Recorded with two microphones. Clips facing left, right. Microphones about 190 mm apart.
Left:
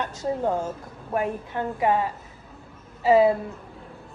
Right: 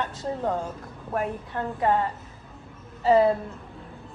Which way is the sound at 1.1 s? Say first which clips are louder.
Left 2 dB; 15° left (ahead or behind).